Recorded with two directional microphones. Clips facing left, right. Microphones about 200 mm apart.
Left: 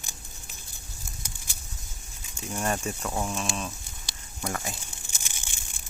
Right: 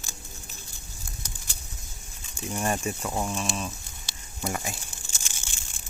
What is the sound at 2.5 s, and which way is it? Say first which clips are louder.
Speech: right 1 dB; 10° right (ahead or behind).